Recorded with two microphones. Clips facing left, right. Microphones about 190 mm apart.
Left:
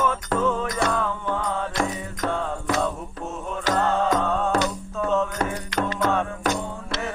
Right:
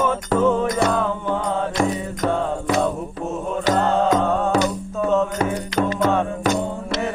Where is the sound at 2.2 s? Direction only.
5° right (ahead or behind).